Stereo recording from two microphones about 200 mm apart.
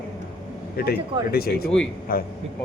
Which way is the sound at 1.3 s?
50° left (ahead or behind).